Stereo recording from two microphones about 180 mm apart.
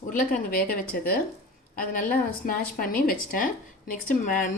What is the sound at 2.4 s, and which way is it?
A woman's voice, 50° left (ahead or behind).